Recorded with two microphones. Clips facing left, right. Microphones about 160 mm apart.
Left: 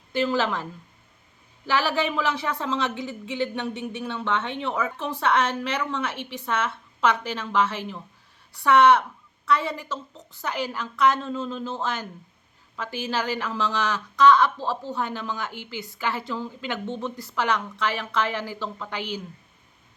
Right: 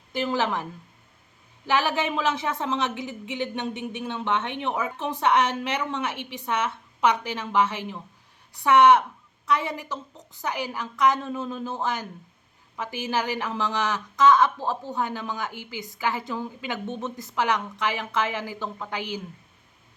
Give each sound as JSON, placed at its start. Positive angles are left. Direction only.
{"t": 0.1, "sound": "a woman's voice", "side_deg": -15}